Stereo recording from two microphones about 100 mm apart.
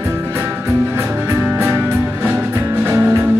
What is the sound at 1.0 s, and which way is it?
Music, 25° right (ahead or behind).